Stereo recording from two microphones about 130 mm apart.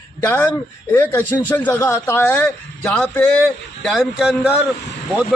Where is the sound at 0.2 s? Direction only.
15° left (ahead or behind).